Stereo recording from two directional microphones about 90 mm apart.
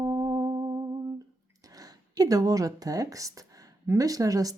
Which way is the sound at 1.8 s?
40° right (ahead or behind).